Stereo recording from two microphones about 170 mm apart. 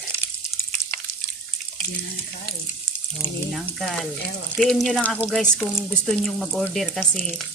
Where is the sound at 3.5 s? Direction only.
Centre (ahead or behind).